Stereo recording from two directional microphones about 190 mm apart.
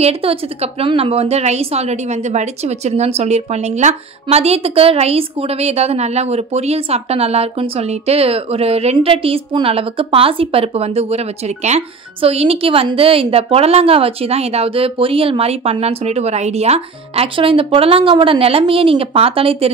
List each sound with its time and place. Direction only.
0.0 s a woman's voice: 30° right (ahead or behind)